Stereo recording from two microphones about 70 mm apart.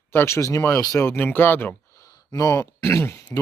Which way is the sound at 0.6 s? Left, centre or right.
Left.